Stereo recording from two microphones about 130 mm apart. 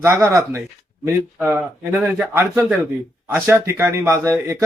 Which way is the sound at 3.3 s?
15° right (ahead or behind).